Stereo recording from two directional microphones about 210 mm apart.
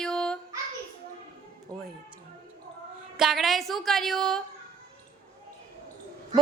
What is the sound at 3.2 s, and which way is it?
A woman's voice, centre (ahead or behind).